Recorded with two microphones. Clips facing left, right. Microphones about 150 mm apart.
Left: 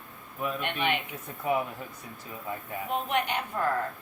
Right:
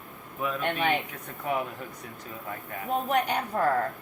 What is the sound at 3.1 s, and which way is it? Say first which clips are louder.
Speech: right 4 dB; 40° right (ahead or behind).